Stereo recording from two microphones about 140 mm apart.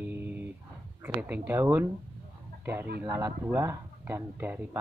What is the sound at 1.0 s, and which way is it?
Speech, 10° right (ahead or behind).